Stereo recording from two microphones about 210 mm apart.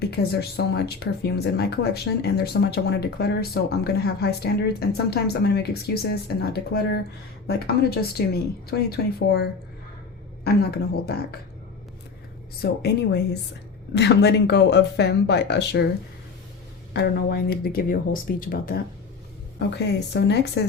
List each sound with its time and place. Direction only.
0.0 s speech: 50° left (ahead or behind)
11.0 s speech: 50° left (ahead or behind)
12.8 s speech: 55° left (ahead or behind)
16.9 s speech: 50° left (ahead or behind)
19.5 s speech: 55° left (ahead or behind)